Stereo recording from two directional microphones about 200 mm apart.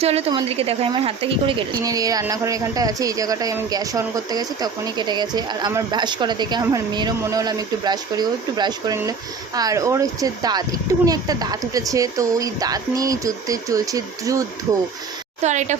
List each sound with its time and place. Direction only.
0.0 s a woman's voice: 30° right (ahead or behind)
15.4 s speech: 35° right (ahead or behind)